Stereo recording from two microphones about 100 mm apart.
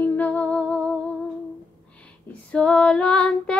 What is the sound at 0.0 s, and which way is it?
Humming, 15° left (ahead or behind).